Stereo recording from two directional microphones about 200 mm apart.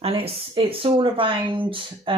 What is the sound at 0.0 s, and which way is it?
Speech, 25° right (ahead or behind).